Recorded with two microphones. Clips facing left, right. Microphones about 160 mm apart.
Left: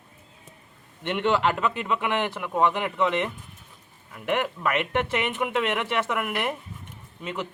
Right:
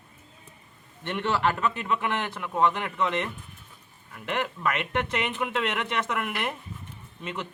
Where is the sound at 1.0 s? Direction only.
15° left (ahead or behind).